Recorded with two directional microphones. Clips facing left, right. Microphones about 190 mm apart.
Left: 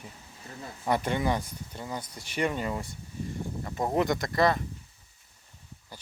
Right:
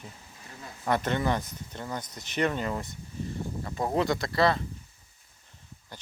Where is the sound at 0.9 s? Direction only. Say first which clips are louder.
Even; 10° left (ahead or behind).